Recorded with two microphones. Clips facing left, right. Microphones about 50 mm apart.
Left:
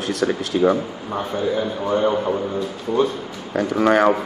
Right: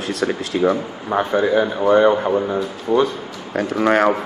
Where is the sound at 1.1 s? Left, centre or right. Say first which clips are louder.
Right 8 dB; right.